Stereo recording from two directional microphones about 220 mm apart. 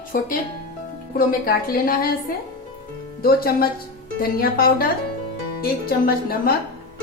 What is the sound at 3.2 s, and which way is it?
A woman's voice, 40° left (ahead or behind).